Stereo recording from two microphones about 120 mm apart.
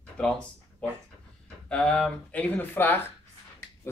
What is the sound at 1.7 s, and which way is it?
Speech, 10° left (ahead or behind).